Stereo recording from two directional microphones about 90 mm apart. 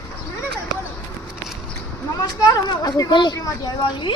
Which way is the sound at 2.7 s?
45° left (ahead or behind).